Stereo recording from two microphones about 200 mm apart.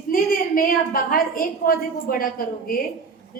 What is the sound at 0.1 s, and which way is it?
A woman's voice, 45° left (ahead or behind).